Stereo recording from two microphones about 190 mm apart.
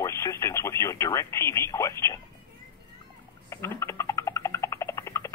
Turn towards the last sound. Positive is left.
turn(degrees=15)  # may be behind; listen again after turning